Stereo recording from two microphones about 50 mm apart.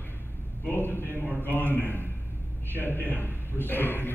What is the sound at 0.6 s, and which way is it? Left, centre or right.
A man's voice, left.